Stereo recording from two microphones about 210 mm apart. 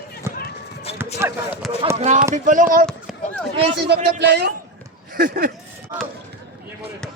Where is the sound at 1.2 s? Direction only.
10° right (ahead or behind).